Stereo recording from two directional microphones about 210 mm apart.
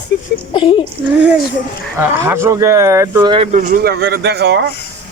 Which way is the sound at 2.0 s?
10° right (ahead or behind).